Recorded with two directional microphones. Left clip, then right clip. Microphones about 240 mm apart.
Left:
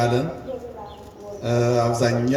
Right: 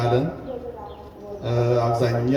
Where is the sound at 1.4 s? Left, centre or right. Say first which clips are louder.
Left 1 dB; left.